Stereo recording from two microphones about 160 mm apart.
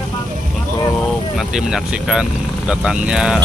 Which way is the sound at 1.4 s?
5° right (ahead or behind).